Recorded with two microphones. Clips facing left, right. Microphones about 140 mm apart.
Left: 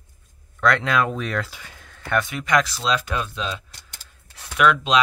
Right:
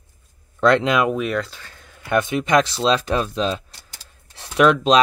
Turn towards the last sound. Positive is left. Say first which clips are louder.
# right 4 dB
turn(degrees=-35)  # may be behind; listen again after turning